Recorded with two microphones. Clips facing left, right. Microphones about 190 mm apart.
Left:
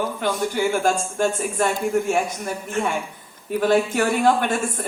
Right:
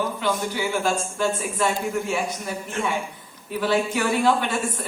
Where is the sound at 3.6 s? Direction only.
50° left (ahead or behind).